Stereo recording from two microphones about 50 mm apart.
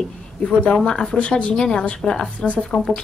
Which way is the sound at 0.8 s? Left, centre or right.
Centre.